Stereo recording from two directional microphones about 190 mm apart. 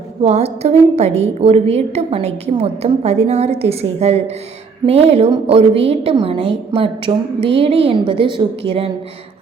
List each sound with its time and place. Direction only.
0.2 s a woman's voice: 35° right (ahead or behind)